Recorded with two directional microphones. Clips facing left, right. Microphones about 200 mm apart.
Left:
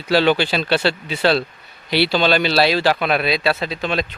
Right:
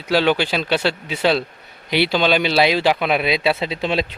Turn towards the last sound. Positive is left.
turn(degrees=-25)  # may be behind; listen again after turning